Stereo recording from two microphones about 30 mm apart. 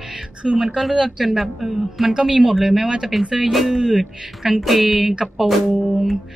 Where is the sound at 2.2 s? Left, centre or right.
Centre.